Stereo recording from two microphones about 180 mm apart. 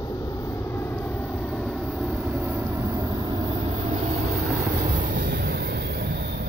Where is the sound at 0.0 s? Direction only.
20° left (ahead or behind); by 3.1 s 10° right (ahead or behind).